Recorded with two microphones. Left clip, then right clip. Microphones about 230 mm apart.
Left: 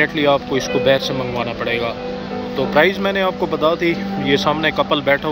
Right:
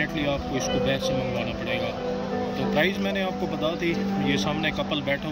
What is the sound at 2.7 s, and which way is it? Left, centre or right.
Speech, centre.